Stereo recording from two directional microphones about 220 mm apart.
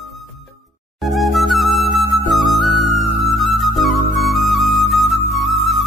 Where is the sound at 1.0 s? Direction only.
Centre (ahead or behind).